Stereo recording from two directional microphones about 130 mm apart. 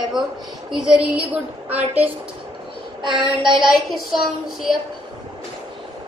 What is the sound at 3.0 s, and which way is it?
Child singing, 35° right (ahead or behind).